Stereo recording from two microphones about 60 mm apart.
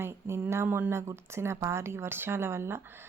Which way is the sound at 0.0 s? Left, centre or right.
Right.